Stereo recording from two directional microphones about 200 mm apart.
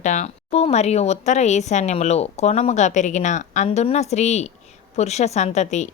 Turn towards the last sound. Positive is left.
turn(degrees=35)  # may be behind; listen again after turning